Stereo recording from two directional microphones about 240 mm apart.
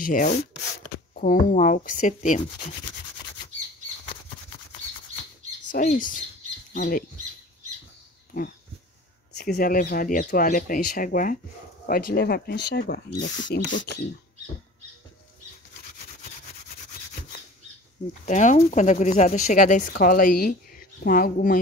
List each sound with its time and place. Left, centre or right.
0.0 s speech: left
5.7 s speech: left
9.4 s speech: left
18.2 s speech: left